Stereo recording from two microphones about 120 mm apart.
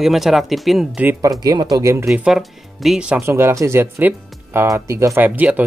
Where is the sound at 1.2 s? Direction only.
30° right (ahead or behind).